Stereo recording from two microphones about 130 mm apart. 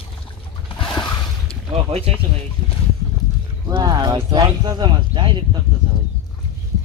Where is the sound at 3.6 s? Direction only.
30° right (ahead or behind).